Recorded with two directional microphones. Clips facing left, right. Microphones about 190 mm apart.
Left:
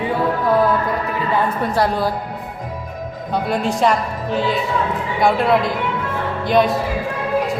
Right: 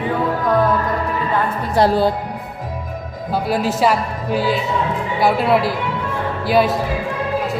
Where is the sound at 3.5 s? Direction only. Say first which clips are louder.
Right 1 dB; 5° right (ahead or behind).